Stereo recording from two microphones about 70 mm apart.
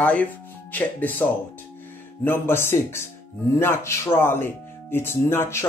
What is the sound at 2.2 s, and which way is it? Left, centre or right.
Speech, left.